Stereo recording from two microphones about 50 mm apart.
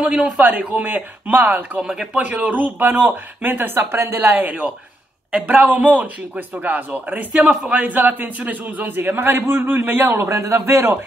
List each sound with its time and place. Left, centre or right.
0.4 s a man's voice: right
1.8 s speech: centre
2.1 s a man's voice: right
7.4 s a man's voice: right
10.3 s a man's voice: right